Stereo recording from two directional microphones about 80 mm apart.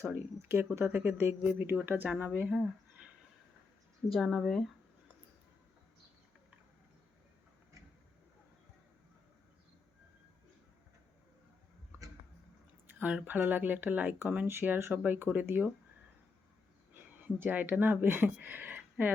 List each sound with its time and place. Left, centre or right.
0.0 s speech: right
4.1 s speech: centre
13.0 s speech: centre
16.9 s speech: right